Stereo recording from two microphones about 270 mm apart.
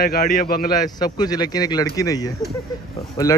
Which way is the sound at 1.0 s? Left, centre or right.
Centre.